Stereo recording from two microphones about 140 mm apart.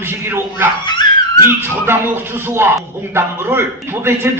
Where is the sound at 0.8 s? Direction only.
35° left (ahead or behind).